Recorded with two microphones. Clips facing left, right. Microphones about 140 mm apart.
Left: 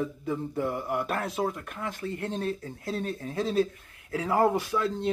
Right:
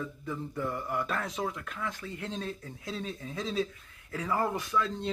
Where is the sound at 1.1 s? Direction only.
60° left (ahead or behind).